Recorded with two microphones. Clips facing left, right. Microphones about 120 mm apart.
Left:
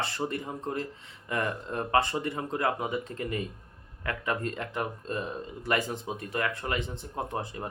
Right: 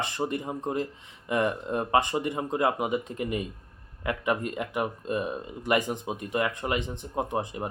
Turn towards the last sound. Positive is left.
turn(degrees=-20)  # may be behind; listen again after turning